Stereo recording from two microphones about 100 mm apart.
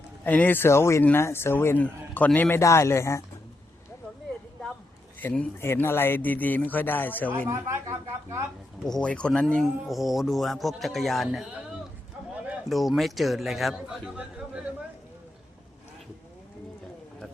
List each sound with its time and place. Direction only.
0.3 s a man's voice: 15° left (ahead or behind)
2.6 s a man's voice: 30° left (ahead or behind)
5.2 s a man's voice: 20° left (ahead or behind)
7.4 s a woman's voice: 30° right (ahead or behind)
8.9 s speech: 10° left (ahead or behind)
12.6 s speech: centre (ahead or behind)